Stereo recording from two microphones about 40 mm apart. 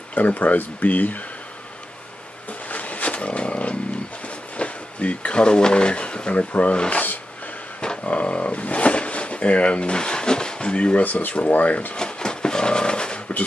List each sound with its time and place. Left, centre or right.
0.1 s speech: left
2.7 s roaring cats: left
4.6 s speech: left
6.5 s speech: left
8.0 s a sound: left
11.0 s speech: left
12.0 s a sound: left